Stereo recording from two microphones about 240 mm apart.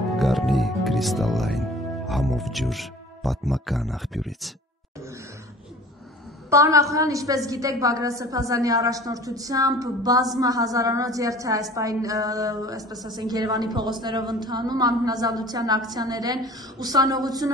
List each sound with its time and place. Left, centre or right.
0.2 s speech: centre
6.5 s a woman's voice: centre